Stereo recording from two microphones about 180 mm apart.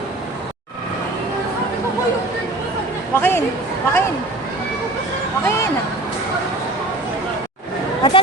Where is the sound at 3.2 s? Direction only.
10° left (ahead or behind).